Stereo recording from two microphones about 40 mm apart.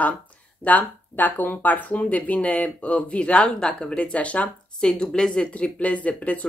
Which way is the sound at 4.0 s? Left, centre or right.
Left.